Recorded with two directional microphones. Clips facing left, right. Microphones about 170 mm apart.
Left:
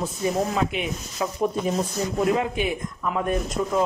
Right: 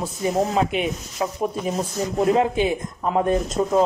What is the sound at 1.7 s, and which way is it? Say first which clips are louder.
Speech: right 1 dB; 25° right (ahead or behind).